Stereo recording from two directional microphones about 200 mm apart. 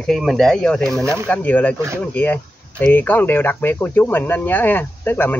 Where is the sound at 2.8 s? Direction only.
10° left (ahead or behind).